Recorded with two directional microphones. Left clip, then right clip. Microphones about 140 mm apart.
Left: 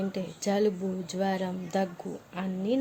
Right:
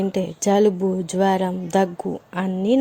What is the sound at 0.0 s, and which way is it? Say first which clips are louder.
A woman's voice: right 10 dB; 65° right (ahead or behind).